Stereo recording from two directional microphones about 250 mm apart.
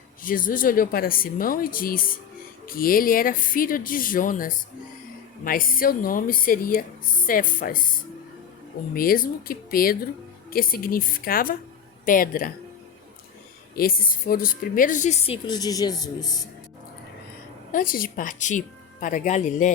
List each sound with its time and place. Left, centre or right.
0.2 s a woman's voice: left
13.7 s a woman's voice: left; by 16.5 s centre
17.7 s a woman's voice: left